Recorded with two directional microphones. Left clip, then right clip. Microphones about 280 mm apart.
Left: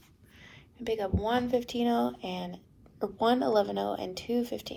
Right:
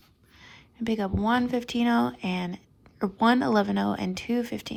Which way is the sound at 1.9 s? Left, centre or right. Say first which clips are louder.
Right 4 dB; right.